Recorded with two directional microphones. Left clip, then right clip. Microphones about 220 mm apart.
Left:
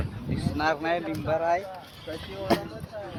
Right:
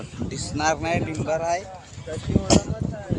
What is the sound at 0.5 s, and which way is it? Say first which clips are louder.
Speech: right 3 dB; 15° right (ahead or behind).